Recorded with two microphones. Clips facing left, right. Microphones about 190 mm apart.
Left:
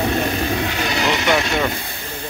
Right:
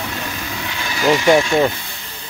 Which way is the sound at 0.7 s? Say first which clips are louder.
Left 5 dB; 65° left (ahead or behind).